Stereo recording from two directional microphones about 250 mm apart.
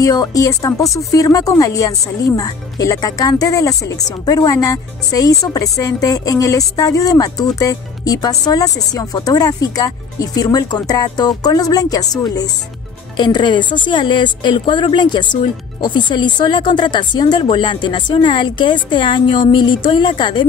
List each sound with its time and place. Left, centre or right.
0.0 s speech: centre